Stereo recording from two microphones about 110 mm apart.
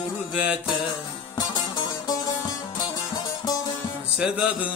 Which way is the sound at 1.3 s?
35° left (ahead or behind).